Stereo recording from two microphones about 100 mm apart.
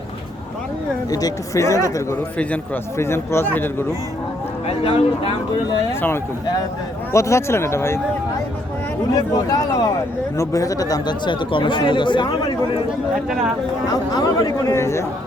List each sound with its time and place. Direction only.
1.1 s speech: 35° left (ahead or behind)
3.0 s speech: 25° left (ahead or behind)
4.7 s speech: 75° left (ahead or behind)
7.1 s speech: 30° left (ahead or behind)
9.1 s speech: 35° left (ahead or behind); by 12.8 s 55° left (ahead or behind)
13.9 s speech: 40° left (ahead or behind)